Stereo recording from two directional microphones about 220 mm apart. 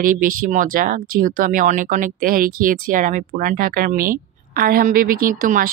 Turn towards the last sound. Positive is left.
turn(degrees=-35)  # may be behind; listen again after turning